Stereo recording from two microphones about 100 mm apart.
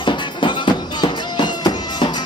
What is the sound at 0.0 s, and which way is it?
Music, 55° left (ahead or behind).